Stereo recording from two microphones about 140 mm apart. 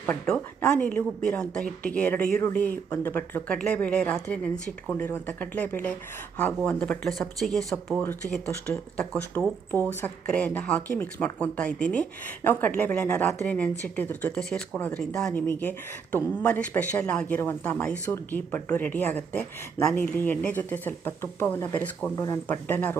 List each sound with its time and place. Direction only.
0.0 s speech: 5° left (ahead or behind)
8.4 s speech: 15° left (ahead or behind)
22.4 s speech: 15° left (ahead or behind)